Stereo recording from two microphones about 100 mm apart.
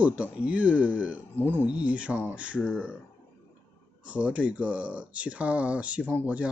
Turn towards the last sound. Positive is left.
turn(degrees=-15)  # may be behind; listen again after turning